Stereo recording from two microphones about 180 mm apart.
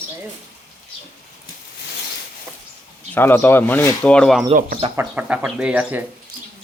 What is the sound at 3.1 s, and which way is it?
Speech, 10° left (ahead or behind).